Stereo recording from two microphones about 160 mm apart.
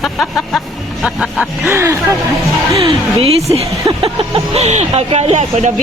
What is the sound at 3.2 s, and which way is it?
Speech, 40° right (ahead or behind).